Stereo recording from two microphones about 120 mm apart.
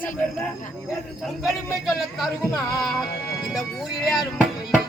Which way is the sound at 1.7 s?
Centre (ahead or behind).